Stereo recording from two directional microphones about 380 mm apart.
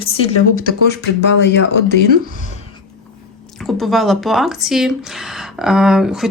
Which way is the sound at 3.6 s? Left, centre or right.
Centre.